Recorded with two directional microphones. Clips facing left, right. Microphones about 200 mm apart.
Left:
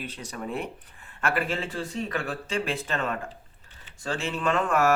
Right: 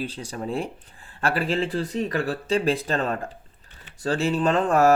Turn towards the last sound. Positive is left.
turn(degrees=-35)  # may be behind; listen again after turning